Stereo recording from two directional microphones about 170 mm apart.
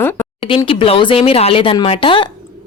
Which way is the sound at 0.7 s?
30° left (ahead or behind).